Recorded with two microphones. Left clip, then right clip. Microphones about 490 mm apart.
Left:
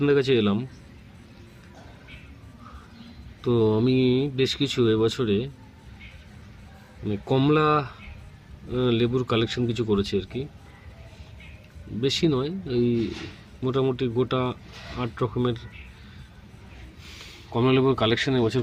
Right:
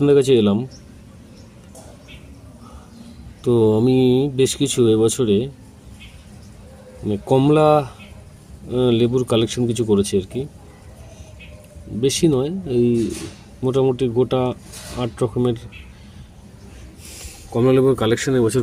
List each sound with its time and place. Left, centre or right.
0.0 s speech: left
3.4 s mantra: left
3.8 s speech: left
7.1 s speech: left
11.9 s speech: left
17.5 s speech: left